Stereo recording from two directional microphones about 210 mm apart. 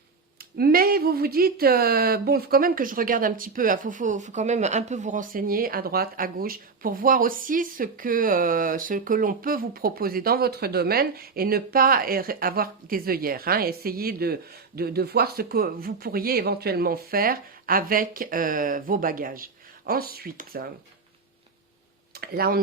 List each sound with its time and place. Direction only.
0.5 s speech: 45° right (ahead or behind)
22.1 s tick-tock: 45° right (ahead or behind)